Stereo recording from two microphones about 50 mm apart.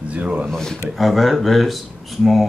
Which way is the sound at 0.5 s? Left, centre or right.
Centre.